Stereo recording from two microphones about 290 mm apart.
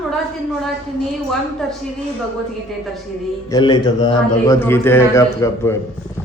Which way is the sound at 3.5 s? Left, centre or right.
Centre.